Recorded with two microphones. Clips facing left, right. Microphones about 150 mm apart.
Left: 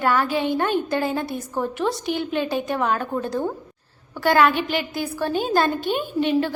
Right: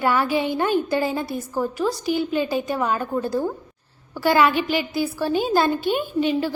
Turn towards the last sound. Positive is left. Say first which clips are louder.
# left 1 dB
turn(degrees=-5)  # may be behind; listen again after turning